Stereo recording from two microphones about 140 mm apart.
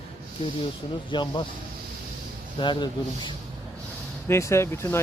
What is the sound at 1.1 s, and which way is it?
Speech, 35° left (ahead or behind).